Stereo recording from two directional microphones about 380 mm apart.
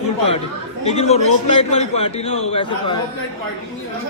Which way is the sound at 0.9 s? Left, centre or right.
Centre.